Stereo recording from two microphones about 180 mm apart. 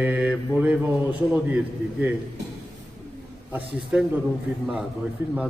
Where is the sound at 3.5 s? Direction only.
10° right (ahead or behind).